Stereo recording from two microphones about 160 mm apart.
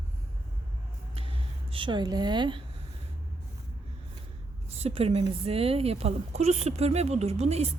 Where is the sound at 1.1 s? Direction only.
35° right (ahead or behind).